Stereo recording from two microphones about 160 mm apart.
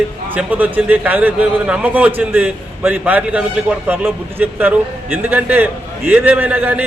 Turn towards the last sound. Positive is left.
turn(degrees=-10)  # may be behind; listen again after turning